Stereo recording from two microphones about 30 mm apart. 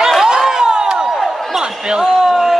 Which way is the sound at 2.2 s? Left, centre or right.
Centre.